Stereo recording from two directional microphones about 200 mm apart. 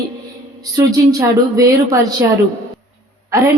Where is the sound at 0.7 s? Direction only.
15° right (ahead or behind).